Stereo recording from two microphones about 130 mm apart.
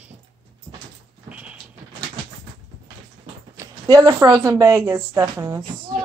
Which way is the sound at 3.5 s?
25° right (ahead or behind).